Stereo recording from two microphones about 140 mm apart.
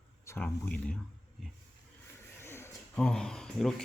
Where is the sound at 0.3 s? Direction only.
15° left (ahead or behind).